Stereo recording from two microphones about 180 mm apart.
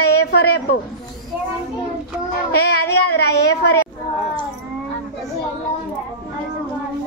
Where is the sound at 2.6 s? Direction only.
65° left (ahead or behind).